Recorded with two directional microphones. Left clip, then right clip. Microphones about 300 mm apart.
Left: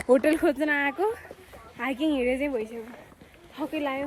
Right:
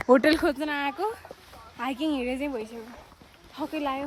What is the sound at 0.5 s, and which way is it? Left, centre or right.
A woman's voice, centre.